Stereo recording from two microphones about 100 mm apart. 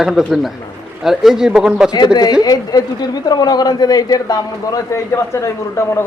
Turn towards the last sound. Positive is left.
turn(degrees=30)  # may be behind; listen again after turning